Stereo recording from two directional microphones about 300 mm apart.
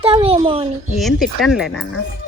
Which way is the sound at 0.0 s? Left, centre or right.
Centre.